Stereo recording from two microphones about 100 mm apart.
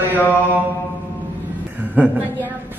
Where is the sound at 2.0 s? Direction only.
15° right (ahead or behind).